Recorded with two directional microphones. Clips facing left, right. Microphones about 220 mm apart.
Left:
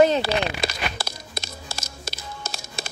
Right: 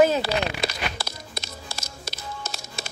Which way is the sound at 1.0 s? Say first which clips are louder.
Left 1 dB; 50° left (ahead or behind).